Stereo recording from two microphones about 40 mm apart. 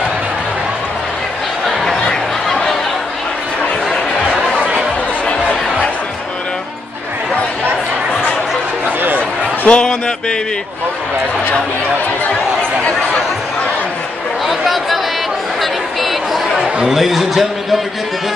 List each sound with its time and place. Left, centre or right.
9.7 s speech: left
14.5 s chatter: centre
16.5 s chatter: right
16.8 s a man's voice: centre